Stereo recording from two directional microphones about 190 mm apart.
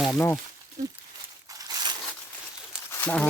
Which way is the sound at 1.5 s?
20° right (ahead or behind).